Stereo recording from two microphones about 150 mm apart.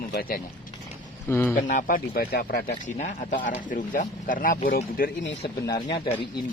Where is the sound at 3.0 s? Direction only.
55° left (ahead or behind); by 5.1 s 75° left (ahead or behind).